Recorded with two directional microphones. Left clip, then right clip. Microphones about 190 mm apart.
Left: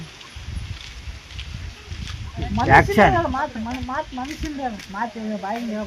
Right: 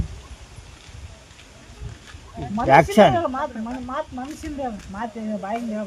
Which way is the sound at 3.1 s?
25° right (ahead or behind).